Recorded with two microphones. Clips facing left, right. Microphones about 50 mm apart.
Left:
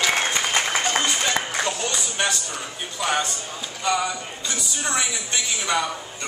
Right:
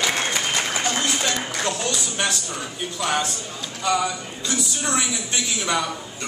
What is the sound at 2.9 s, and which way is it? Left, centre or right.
A man's voice, centre.